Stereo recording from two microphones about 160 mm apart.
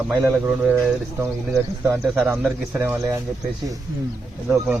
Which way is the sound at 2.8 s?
15° right (ahead or behind).